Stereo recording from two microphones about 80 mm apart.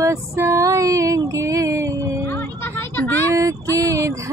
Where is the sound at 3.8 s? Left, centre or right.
Right.